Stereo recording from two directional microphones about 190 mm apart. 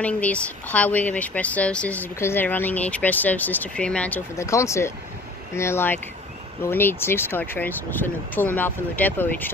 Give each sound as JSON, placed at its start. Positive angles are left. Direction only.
{"t": 0.0, "sound": "speech", "side_deg": 5}